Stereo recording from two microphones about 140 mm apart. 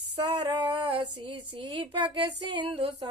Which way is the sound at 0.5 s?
35° right (ahead or behind).